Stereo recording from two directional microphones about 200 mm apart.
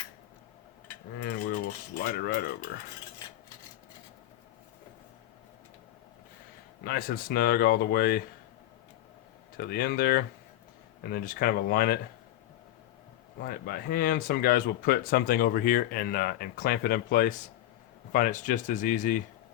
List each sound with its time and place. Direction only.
1.2 s speech: 55° left (ahead or behind)
6.8 s speech: 50° left (ahead or behind)
9.6 s speech: 50° left (ahead or behind)
13.4 s speech: 50° left (ahead or behind)